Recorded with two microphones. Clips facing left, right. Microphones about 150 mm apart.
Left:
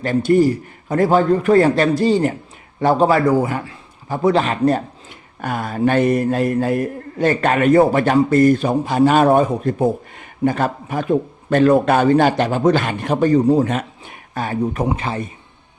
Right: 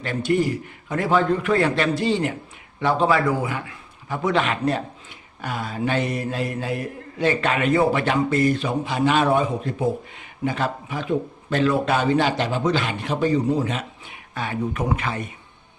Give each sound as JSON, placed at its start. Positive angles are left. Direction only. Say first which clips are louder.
{"t": 0.0, "sound": "a man's voice", "louder": "left 7 dB", "side_deg": 40}
{"t": 5.4, "sound": "mantra", "louder": "left 7 dB", "side_deg": 50}
{"t": 14.8, "sound": "a man's voice", "louder": "left 4 dB", "side_deg": 30}